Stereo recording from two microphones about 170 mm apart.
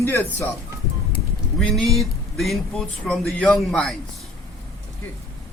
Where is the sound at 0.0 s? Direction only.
15° left (ahead or behind).